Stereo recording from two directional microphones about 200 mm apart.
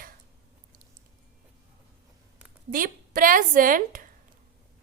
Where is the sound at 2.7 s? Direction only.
45° right (ahead or behind).